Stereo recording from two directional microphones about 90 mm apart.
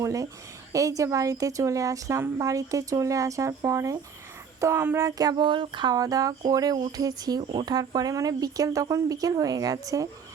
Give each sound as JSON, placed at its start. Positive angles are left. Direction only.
{"t": 0.0, "sound": "speech", "side_deg": -40}
{"t": 4.9, "sound": "speech", "side_deg": -40}
{"t": 5.9, "sound": "speech", "side_deg": -45}